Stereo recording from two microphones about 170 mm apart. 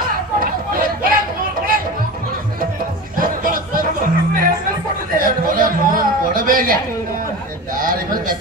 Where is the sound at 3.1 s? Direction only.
55° right (ahead or behind).